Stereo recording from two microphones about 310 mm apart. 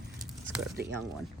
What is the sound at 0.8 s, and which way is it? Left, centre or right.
Speech, right.